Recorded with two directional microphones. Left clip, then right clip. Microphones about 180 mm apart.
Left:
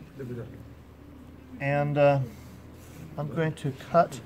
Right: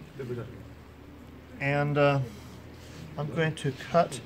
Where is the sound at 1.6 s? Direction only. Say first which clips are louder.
Left 2 dB; 20° left (ahead or behind).